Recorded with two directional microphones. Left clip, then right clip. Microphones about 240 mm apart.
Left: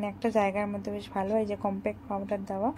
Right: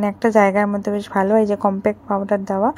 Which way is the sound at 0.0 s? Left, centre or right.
Right.